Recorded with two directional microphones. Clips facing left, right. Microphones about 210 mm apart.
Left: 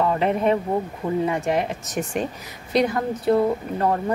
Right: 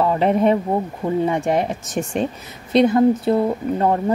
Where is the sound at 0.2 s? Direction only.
35° right (ahead or behind).